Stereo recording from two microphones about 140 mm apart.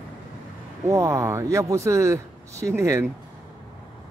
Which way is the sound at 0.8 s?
25° right (ahead or behind).